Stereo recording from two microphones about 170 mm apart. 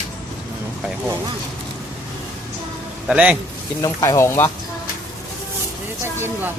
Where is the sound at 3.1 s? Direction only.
5° right (ahead or behind).